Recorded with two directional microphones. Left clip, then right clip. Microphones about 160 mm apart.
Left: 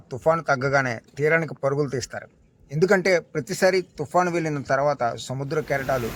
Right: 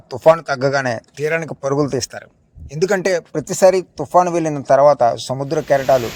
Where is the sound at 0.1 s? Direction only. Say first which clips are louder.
Right 8 dB; 30° right (ahead or behind).